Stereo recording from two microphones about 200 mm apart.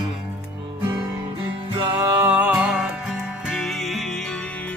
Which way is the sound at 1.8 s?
15° right (ahead or behind).